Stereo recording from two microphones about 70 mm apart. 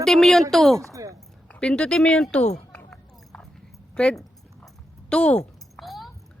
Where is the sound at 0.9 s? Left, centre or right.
Right.